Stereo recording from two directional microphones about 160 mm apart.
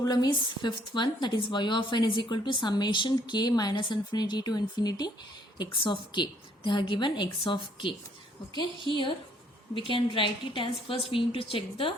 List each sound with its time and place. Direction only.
0.0 s a woman's voice: 25° left (ahead or behind)